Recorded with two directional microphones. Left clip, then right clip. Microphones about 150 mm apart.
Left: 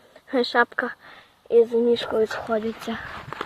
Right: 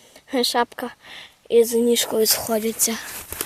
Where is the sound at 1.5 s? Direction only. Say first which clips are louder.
Right 1 dB; 50° right (ahead or behind).